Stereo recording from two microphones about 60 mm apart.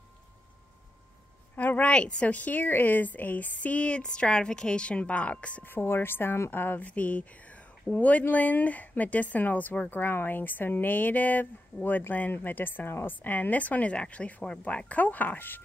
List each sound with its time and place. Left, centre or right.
1.6 s speech: left
5.7 s speech: left